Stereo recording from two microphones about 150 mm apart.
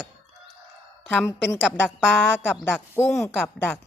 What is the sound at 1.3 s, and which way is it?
Speech, 15° left (ahead or behind).